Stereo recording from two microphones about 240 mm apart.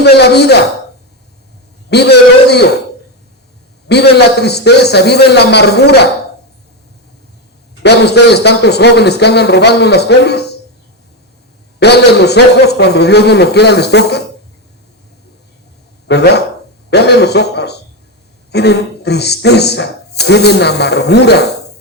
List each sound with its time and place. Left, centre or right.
0.0 s speech: left
1.9 s speech: left
3.8 s speech: left
7.8 s speech: left
11.8 s speech: left
16.0 s speech: left